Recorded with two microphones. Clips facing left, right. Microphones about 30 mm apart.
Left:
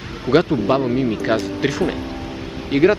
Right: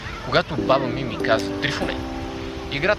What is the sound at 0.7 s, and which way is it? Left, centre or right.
Speech, centre.